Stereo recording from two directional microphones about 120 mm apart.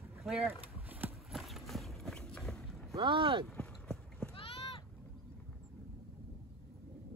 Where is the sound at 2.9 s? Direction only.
45° right (ahead or behind).